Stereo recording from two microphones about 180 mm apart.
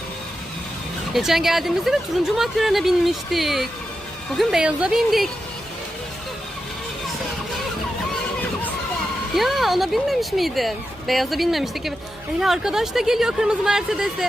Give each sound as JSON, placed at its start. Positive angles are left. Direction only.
{"t": 1.1, "sound": "speech", "side_deg": 0}
{"t": 9.3, "sound": "speech", "side_deg": 0}